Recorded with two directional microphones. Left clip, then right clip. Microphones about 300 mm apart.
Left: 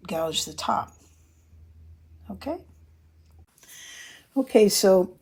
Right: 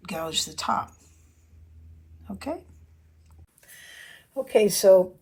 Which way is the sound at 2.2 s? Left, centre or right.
Centre.